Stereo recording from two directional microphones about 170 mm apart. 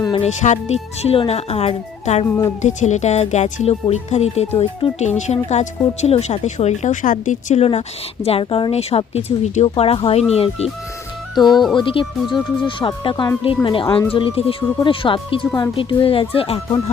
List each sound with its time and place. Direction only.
0.2 s a woman's voice: 45° left (ahead or behind)
11.5 s speech: centre (ahead or behind)
11.8 s a woman's voice: 30° left (ahead or behind)